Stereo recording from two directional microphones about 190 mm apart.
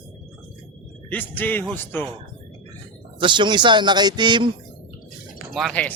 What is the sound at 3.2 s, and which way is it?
Speech, 25° right (ahead or behind).